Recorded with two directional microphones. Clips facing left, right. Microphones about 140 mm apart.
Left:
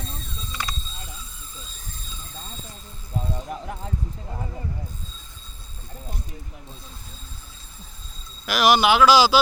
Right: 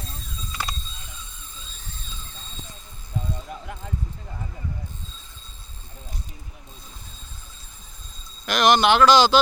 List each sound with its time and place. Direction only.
0.0 s a sound: centre (ahead or behind)
3.3 s mechanisms: 35° left (ahead or behind)
8.4 s speech: 5° left (ahead or behind)